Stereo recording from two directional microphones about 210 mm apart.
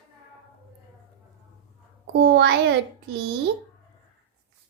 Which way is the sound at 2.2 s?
50° right (ahead or behind).